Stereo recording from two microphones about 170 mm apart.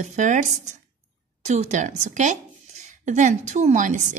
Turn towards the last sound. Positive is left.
turn(degrees=-45)  # may be behind; listen again after turning